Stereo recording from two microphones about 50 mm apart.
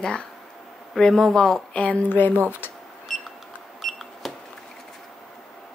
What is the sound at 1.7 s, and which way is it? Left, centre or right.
Speech, left.